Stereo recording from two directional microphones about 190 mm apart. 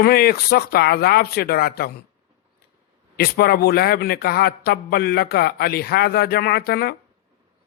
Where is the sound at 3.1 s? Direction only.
55° left (ahead or behind).